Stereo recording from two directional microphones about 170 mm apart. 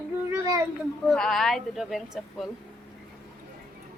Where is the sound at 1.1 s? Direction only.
Centre (ahead or behind).